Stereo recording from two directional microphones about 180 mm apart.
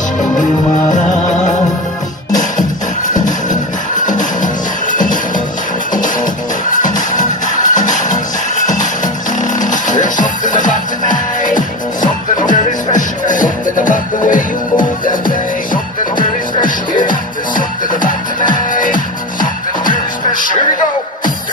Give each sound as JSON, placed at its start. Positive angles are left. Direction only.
{"t": 0.4, "sound": "music", "side_deg": 45}
{"t": 3.1, "sound": "music", "side_deg": 45}